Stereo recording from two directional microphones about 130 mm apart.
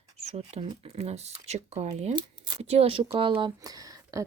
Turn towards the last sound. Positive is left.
turn(degrees=-25)  # may be behind; listen again after turning